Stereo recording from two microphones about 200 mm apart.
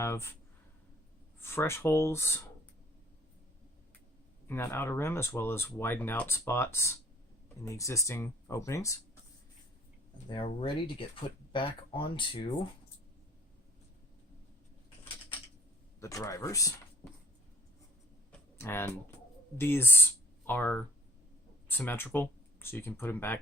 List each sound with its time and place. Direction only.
0.0 s speech: 15° left (ahead or behind)
1.4 s speech: 10° left (ahead or behind)
4.4 s speech: 10° left (ahead or behind)
10.2 s speech: 25° left (ahead or behind)
16.0 s speech: 15° left (ahead or behind)
18.3 s computer keyboard: 10° left (ahead or behind)
19.5 s speech: 10° left (ahead or behind)